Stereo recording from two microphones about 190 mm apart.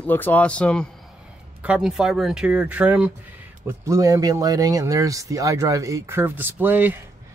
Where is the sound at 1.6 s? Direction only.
5° right (ahead or behind).